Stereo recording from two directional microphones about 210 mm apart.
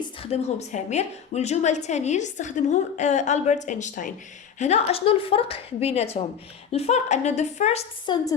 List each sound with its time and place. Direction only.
0.2 s a woman's voice: 30° left (ahead or behind)